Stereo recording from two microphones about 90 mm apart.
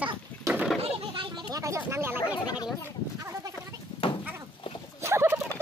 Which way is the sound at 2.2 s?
50° left (ahead or behind).